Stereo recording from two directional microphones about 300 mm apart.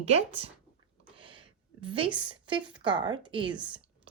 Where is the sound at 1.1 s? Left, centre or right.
Centre.